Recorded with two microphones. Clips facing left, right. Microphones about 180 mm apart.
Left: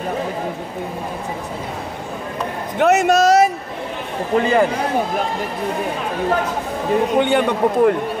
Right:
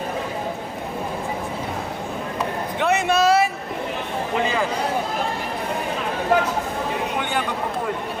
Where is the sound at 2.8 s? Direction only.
40° left (ahead or behind).